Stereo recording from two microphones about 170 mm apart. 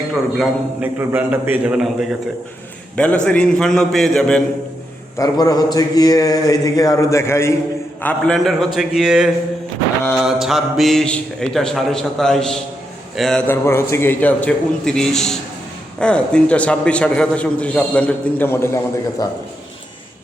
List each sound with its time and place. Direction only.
0.3 s a man's voice: 10° right (ahead or behind)
2.9 s a man's voice: 5° left (ahead or behind)
5.1 s speech: 20° left (ahead or behind)
8.0 s a man's voice: 5° left (ahead or behind)
10.4 s a man's voice: centre (ahead or behind)
13.5 s a man's voice: 15° left (ahead or behind)